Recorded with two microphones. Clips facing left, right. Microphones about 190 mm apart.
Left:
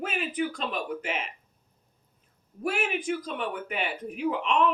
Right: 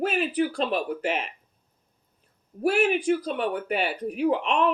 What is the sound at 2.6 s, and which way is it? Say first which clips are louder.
Speech: right 7 dB; 35° right (ahead or behind).